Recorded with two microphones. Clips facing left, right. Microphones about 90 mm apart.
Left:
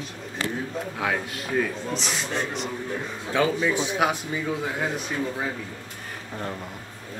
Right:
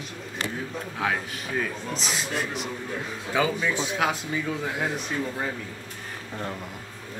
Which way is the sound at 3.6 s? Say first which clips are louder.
Left 2 dB; 15° left (ahead or behind).